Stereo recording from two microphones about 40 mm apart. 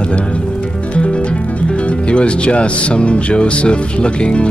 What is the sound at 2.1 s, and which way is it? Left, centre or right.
Speech, left.